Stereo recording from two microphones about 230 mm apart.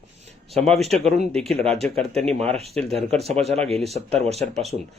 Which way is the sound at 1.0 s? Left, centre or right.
Right.